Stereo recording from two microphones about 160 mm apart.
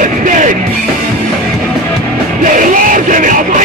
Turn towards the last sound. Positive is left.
turn(degrees=-55)  # may be behind; listen again after turning